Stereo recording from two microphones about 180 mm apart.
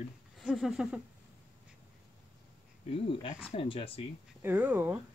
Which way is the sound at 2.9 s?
30° left (ahead or behind).